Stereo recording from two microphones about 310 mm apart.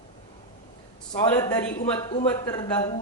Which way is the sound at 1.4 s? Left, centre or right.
Centre.